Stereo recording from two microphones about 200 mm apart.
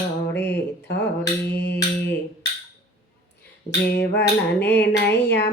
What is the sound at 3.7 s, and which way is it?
Speech, 55° left (ahead or behind).